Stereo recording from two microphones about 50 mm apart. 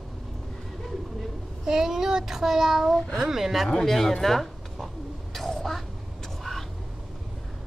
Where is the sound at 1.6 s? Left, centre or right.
Centre.